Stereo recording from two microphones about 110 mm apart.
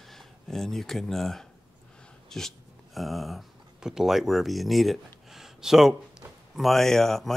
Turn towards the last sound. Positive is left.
turn(degrees=5)  # may be behind; listen again after turning